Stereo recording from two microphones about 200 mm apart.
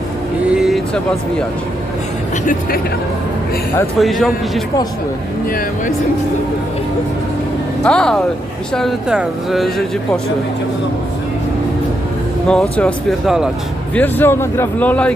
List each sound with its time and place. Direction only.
0.5 s a sound: centre (ahead or behind)
2.5 s speech: 45° left (ahead or behind)
3.9 s speech: centre (ahead or behind)
5.5 s speech: 45° left (ahead or behind)
7.9 s speech: 5° left (ahead or behind)
12.5 s speech: 5° left (ahead or behind)
13.9 s speech: 10° left (ahead or behind)